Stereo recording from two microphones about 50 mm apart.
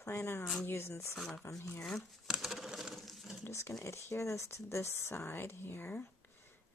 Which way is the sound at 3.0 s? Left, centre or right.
Centre.